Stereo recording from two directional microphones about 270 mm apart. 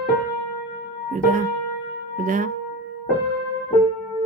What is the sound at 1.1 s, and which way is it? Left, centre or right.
Music, right.